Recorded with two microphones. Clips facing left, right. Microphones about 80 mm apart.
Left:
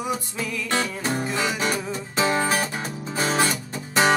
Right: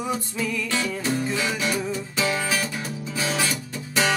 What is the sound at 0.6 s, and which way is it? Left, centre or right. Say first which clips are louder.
Music: left 1 dB; left.